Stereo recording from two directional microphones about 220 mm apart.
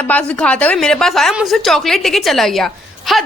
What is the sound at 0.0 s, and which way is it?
Speech, 5° left (ahead or behind).